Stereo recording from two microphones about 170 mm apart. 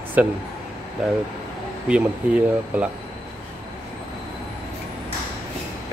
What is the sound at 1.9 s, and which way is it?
Speech, 5° right (ahead or behind).